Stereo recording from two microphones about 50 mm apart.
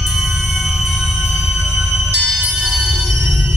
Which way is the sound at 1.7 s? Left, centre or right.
Right.